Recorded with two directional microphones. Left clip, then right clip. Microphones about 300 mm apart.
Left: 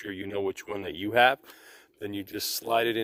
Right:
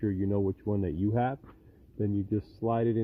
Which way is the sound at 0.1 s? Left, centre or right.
Left.